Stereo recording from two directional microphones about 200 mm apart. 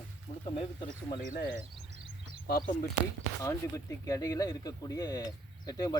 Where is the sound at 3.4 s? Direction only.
15° left (ahead or behind).